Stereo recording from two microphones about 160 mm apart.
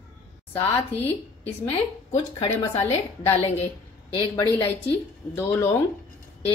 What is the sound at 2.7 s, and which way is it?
Speech, 40° left (ahead or behind).